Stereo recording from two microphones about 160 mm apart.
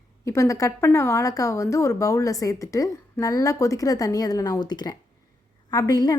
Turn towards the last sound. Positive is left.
turn(degrees=25)  # may be behind; listen again after turning